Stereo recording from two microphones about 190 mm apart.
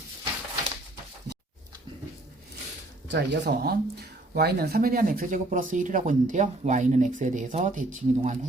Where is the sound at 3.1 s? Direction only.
60° right (ahead or behind).